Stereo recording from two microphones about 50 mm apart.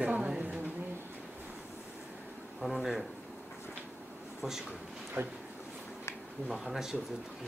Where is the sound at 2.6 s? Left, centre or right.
Centre.